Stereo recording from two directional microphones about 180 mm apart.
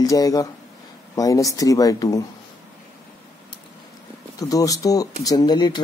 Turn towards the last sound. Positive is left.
turn(degrees=25)  # may be behind; listen again after turning